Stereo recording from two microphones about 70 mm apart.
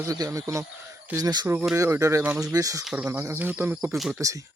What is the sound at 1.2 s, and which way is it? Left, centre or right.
Speech, right.